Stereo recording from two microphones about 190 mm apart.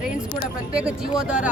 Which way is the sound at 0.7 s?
5° right (ahead or behind).